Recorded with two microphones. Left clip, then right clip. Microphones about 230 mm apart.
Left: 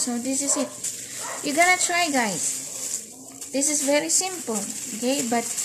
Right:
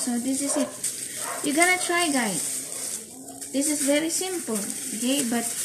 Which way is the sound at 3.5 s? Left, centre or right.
Left.